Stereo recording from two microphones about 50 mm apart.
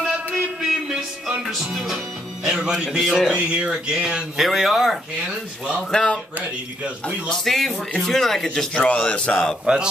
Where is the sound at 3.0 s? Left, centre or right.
Centre.